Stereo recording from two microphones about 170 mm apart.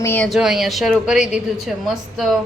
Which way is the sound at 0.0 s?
15° left (ahead or behind).